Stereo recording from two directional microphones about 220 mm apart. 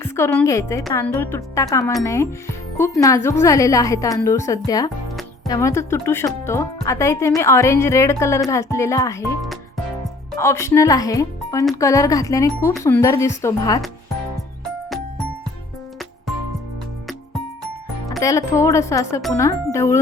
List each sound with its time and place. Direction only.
0.0 s a woman's voice: 10° left (ahead or behind)
10.3 s speech: 10° left (ahead or behind)
18.2 s speech: 15° left (ahead or behind)